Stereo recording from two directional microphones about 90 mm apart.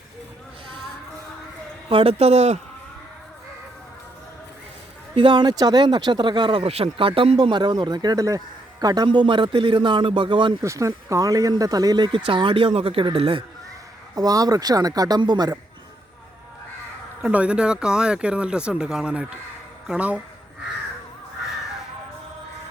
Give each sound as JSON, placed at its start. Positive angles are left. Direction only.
{"t": 1.9, "sound": "a man's voice", "side_deg": -90}
{"t": 5.1, "sound": "speech", "side_deg": -60}
{"t": 7.4, "sound": "speech", "side_deg": -55}
{"t": 9.0, "sound": "speech", "side_deg": -65}
{"t": 10.6, "sound": "speech", "side_deg": -35}
{"t": 14.2, "sound": "speech", "side_deg": -45}
{"t": 17.2, "sound": "speech", "side_deg": -15}